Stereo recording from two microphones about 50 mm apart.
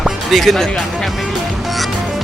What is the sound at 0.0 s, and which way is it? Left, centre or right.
Music, centre.